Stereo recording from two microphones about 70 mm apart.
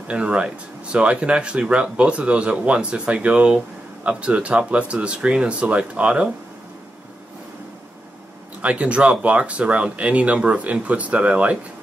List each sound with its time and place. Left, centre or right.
0.1 s speech: centre
8.5 s speech: centre